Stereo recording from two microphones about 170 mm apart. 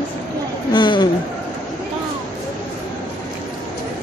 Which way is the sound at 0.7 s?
25° left (ahead or behind).